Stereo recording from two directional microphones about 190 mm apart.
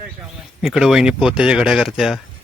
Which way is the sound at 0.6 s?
Centre (ahead or behind).